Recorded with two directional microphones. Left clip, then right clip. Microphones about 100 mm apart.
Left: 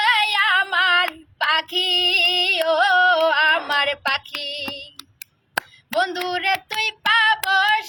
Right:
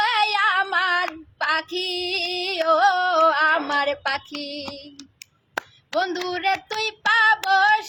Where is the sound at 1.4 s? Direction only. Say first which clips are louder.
Left 4 dB; 35° right (ahead or behind).